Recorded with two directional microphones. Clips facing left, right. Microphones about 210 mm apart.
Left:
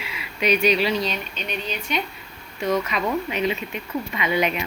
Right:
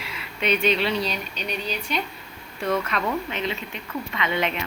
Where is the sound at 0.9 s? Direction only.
35° right (ahead or behind).